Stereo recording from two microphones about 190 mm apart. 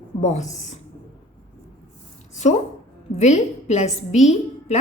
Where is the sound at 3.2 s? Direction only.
35° left (ahead or behind).